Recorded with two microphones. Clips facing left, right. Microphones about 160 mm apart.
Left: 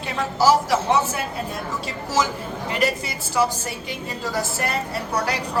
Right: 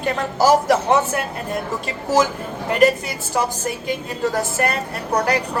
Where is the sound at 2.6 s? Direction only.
50° right (ahead or behind).